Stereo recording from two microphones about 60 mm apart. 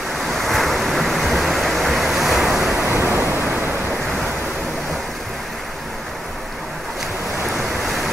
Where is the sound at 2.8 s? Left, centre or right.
Right.